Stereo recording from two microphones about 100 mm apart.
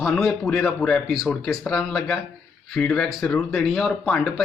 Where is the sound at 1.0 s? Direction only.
Centre (ahead or behind).